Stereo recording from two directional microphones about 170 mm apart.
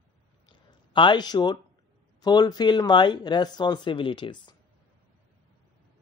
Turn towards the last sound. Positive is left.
turn(degrees=30)  # may be behind; listen again after turning